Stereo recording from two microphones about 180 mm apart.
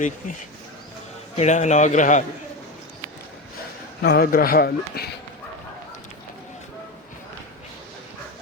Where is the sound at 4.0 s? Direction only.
60° left (ahead or behind).